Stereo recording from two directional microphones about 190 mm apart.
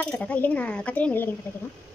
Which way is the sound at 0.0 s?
5° left (ahead or behind).